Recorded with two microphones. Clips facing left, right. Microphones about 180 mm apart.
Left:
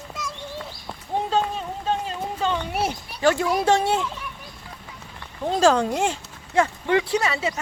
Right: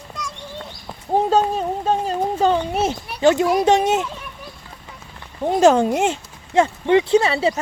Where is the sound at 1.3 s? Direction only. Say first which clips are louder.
Right 6 dB; 45° right (ahead or behind).